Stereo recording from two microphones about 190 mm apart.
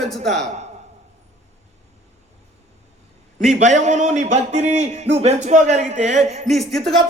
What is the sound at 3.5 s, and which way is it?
A man's voice, 40° right (ahead or behind).